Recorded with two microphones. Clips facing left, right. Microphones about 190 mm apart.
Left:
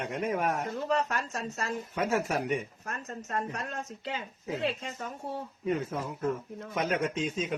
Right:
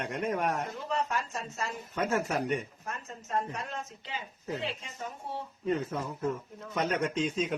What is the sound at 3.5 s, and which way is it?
Speech, 65° left (ahead or behind).